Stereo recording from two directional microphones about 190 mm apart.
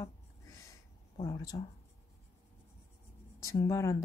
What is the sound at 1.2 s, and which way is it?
Speech, 20° left (ahead or behind).